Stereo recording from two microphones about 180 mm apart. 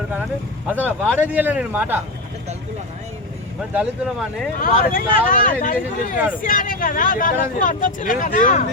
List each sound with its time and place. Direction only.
0.8 s speech: 5° left (ahead or behind)
1.3 s speech: 10° right (ahead or behind)
3.8 s speech: centre (ahead or behind)
4.6 s speech: 50° left (ahead or behind)